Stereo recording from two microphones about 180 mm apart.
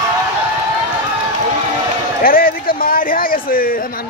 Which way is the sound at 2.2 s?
55° left (ahead or behind).